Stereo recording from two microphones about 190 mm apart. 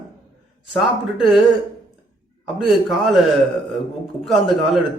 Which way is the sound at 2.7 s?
Centre (ahead or behind).